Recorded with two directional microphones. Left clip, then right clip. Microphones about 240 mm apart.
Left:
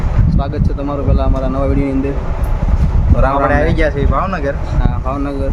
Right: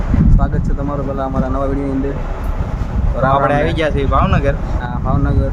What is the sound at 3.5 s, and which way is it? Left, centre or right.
Speech, centre.